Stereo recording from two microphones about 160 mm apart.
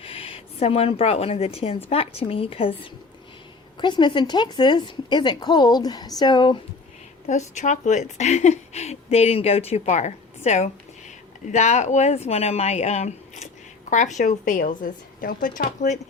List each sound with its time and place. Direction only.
0.0 s a woman's voice: 35° left (ahead or behind)
7.3 s a woman's voice: 50° left (ahead or behind)